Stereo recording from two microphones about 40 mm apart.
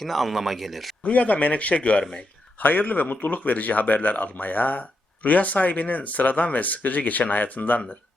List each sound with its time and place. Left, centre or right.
0.0 s speech: centre
1.0 s speech: left
2.6 s speech: left